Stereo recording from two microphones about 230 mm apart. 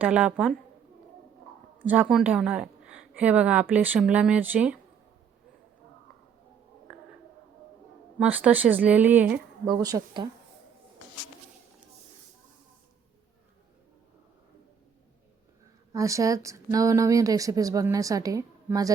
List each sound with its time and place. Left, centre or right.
0.0 s a woman's voice: centre
1.9 s a woman's voice: centre
6.9 s a sound: centre
8.2 s speech: centre
9.6 s speech: centre
15.9 s speech: centre